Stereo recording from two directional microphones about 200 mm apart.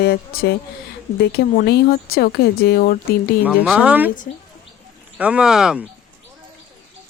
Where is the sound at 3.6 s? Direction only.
5° right (ahead or behind).